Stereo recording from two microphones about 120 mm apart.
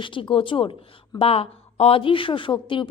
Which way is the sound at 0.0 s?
45° left (ahead or behind).